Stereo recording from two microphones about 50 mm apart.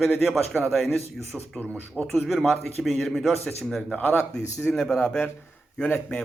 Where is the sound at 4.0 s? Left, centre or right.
Left.